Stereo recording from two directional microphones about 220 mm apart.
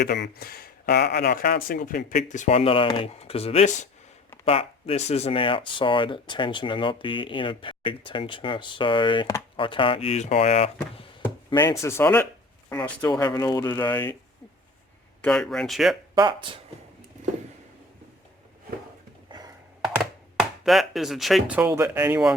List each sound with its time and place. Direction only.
0.0 s speech: 45° left (ahead or behind); by 11.0 s 30° left (ahead or behind)
11.5 s speech: 15° left (ahead or behind)
13.1 s speech: 15° left (ahead or behind)
15.2 s speech: 5° left (ahead or behind)
16.1 s speech: 20° right (ahead or behind)
19.9 s chopping: centre (ahead or behind)